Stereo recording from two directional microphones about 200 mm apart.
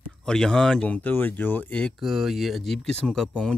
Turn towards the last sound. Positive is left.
turn(degrees=5)  # may be behind; listen again after turning